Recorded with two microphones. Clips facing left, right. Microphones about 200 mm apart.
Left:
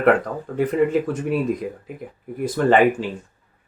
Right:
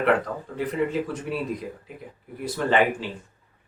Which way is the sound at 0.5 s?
45° left (ahead or behind).